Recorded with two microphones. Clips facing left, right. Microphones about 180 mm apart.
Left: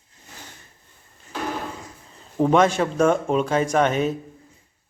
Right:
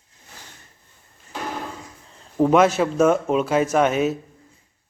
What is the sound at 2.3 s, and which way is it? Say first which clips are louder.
Speech: right 2 dB; 5° right (ahead or behind).